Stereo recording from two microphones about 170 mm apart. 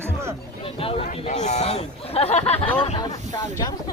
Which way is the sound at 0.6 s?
35° left (ahead or behind).